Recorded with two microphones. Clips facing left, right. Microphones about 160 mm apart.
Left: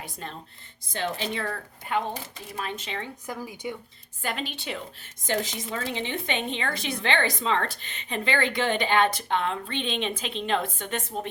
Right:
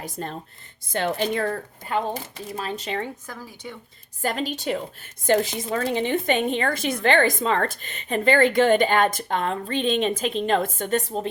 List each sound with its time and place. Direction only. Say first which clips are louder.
0.0 s a woman's voice: right 6 dB; 45° right (ahead or behind)
2.6 s a woman's voice: right 5 dB; 35° right (ahead or behind)
3.2 s speech: left 4 dB; 15° left (ahead or behind)
4.2 s a woman's voice: right 6 dB; 40° right (ahead or behind)
5.2 s a woman's voice: right 8 dB; 50° right (ahead or behind); by 11.3 s 35° right (ahead or behind)